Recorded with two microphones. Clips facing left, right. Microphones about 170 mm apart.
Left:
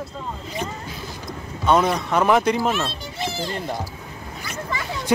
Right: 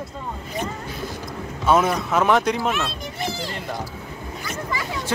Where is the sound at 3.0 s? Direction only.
25° left (ahead or behind).